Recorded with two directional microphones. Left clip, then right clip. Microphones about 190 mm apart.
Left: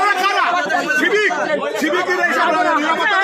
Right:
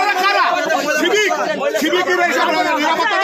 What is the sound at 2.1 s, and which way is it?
Speech, 35° right (ahead or behind).